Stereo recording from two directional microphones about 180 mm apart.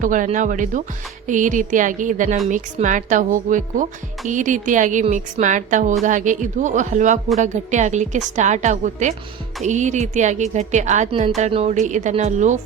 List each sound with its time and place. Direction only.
0.0 s a woman's voice: 45° right (ahead or behind)